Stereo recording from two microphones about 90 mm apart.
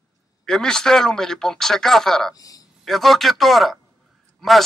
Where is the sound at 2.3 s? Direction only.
40° left (ahead or behind).